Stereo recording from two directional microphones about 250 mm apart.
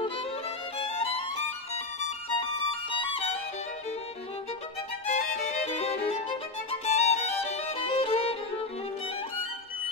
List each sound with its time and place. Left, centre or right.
0.7 s music: left
2.2 s violin: left
5.0 s music: left
6.7 s violin: left